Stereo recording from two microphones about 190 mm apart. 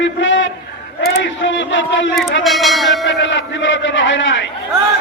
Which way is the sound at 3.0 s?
75° left (ahead or behind).